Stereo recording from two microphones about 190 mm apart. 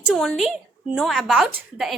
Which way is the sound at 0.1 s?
Centre (ahead or behind).